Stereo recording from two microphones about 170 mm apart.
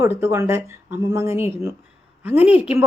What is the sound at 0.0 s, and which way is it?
Speech, 15° right (ahead or behind).